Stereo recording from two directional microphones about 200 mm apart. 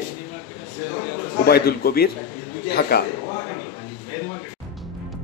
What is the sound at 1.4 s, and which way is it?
Speech, 50° left (ahead or behind).